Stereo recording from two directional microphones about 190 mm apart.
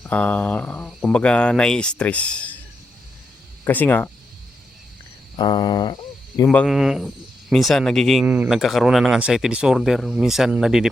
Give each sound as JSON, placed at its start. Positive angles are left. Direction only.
{"t": 0.0, "sound": "speech", "side_deg": 5}
{"t": 3.6, "sound": "speech", "side_deg": 10}
{"t": 5.4, "sound": "speech", "side_deg": 20}
{"t": 6.5, "sound": "speech", "side_deg": 0}